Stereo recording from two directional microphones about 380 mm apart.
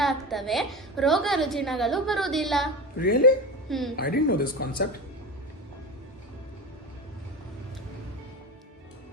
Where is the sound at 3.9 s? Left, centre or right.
Left.